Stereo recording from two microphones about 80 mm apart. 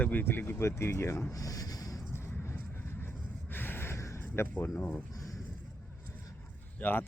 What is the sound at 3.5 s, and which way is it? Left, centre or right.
Gasp, left.